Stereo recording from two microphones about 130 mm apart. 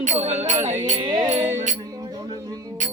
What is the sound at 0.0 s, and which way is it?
Music, 55° right (ahead or behind).